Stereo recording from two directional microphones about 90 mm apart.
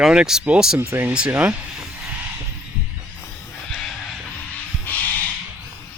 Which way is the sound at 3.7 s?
5° left (ahead or behind).